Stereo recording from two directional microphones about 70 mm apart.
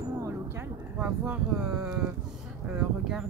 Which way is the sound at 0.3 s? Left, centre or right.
Right.